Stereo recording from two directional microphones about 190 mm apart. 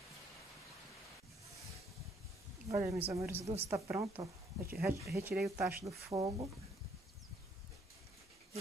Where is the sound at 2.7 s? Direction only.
15° right (ahead or behind).